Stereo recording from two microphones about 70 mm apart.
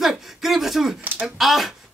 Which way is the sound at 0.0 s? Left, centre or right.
Centre.